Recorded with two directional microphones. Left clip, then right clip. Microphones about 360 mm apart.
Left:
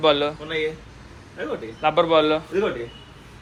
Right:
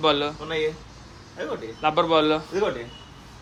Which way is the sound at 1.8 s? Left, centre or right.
Centre.